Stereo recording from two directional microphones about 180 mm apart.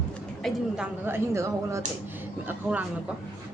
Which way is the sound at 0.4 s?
Centre (ahead or behind).